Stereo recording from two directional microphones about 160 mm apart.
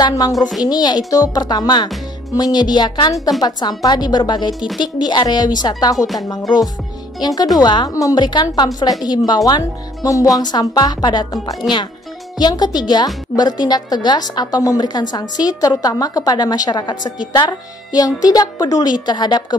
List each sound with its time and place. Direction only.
0.0 s a woman's voice: 25° left (ahead or behind)
4.6 s speech: 5° right (ahead or behind)
4.8 s a woman's voice: 25° left (ahead or behind)
7.2 s a woman's voice: 25° left (ahead or behind)
12.4 s a woman's voice: 25° left (ahead or behind)